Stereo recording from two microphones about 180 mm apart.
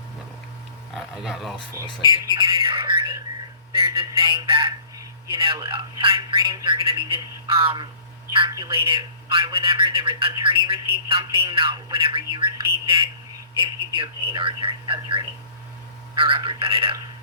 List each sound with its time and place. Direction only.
0.9 s speech: centre (ahead or behind)
1.5 s speech: 25° left (ahead or behind)
2.3 s bird: 30° right (ahead or behind)
3.7 s a man's voice: 30° right (ahead or behind)